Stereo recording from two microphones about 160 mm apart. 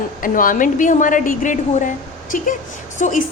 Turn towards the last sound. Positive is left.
turn(degrees=50)  # may be behind; listen again after turning